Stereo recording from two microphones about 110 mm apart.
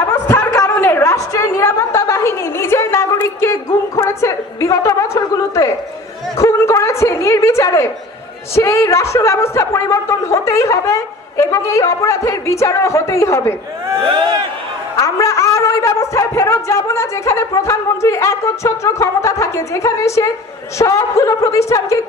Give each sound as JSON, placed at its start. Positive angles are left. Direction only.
{"t": 0.3, "sound": "a sound", "side_deg": 25}
{"t": 6.3, "sound": "a woman's voice", "side_deg": 25}
{"t": 15.0, "sound": "a man's voice", "side_deg": 30}